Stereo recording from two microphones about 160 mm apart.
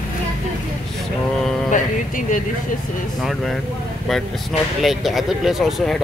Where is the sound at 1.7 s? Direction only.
55° left (ahead or behind).